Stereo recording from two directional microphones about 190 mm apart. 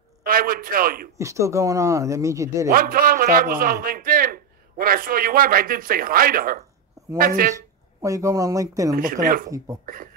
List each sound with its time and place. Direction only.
0.2 s a man's voice: 50° right (ahead or behind)
1.1 s speech: 15° right (ahead or behind)
2.7 s a man's voice: 50° right (ahead or behind)
8.0 s speech: 15° right (ahead or behind)
8.9 s a man's voice: 45° right (ahead or behind)